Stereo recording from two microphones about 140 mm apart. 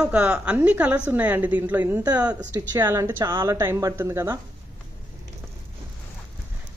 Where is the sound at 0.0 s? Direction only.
10° right (ahead or behind).